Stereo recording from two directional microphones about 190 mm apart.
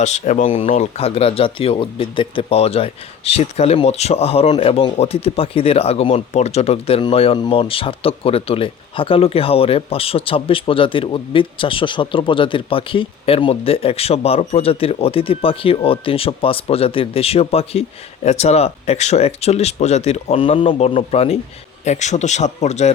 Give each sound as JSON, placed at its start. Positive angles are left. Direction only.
{"t": 0.0, "sound": "speech", "side_deg": 40}